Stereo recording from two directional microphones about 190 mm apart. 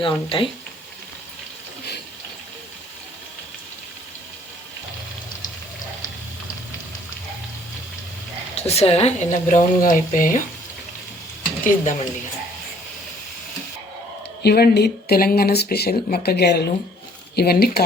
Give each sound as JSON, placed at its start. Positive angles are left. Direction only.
{"t": 0.0, "sound": "speech", "side_deg": 25}
{"t": 8.5, "sound": "speech", "side_deg": 35}
{"t": 11.6, "sound": "speech", "side_deg": 40}
{"t": 14.4, "sound": "speech", "side_deg": 55}